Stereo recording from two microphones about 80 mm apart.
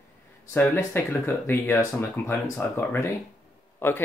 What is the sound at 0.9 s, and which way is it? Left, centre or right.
Speech, left.